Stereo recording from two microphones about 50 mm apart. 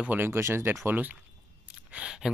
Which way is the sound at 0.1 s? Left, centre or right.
Right.